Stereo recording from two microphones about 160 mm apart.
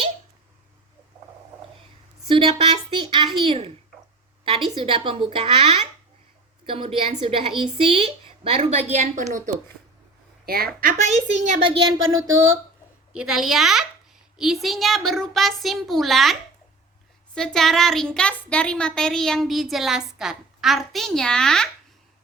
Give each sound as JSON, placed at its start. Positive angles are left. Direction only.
{"t": 2.2, "sound": "a woman's voice", "side_deg": -30}
{"t": 10.4, "sound": "a woman's voice", "side_deg": -70}
{"t": 11.1, "sound": "a woman's voice", "side_deg": -45}
{"t": 12.2, "sound": "speech", "side_deg": -15}
{"t": 13.1, "sound": "speech", "side_deg": 0}